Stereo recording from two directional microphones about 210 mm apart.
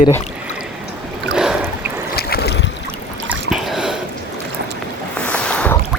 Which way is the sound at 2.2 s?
50° left (ahead or behind).